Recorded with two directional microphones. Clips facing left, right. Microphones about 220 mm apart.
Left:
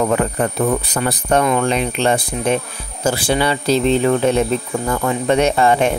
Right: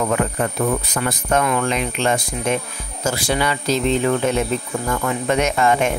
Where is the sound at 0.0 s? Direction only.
35° left (ahead or behind).